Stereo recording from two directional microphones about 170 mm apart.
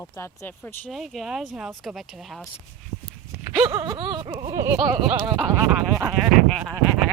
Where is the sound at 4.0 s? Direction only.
25° right (ahead or behind).